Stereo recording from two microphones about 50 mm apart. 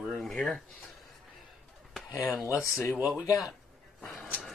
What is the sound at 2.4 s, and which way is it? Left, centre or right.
Speech, left.